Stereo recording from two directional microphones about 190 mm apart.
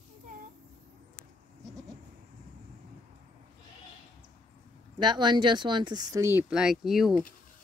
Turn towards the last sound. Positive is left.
turn(degrees=0)  # may be behind; listen again after turning